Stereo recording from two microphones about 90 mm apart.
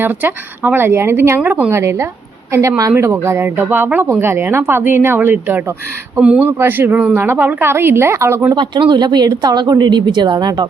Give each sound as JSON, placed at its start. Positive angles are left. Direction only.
{"t": 0.0, "sound": "speech", "side_deg": -20}
{"t": 1.7, "sound": "speech", "side_deg": -30}
{"t": 6.1, "sound": "speech", "side_deg": -10}
{"t": 6.4, "sound": "speech", "side_deg": -25}
{"t": 8.5, "sound": "a woman's voice", "side_deg": -55}